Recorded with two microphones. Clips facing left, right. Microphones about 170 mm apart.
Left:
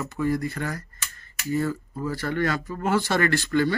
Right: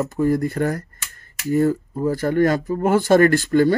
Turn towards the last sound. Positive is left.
turn(degrees=-45)  # may be behind; listen again after turning